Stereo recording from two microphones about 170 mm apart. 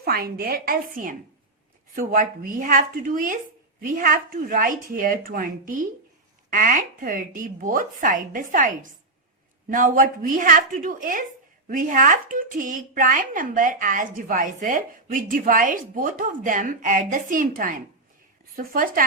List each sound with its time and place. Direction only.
0.0 s a woman's voice: 65° right (ahead or behind)